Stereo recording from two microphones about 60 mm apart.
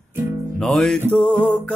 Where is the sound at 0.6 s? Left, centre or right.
Centre.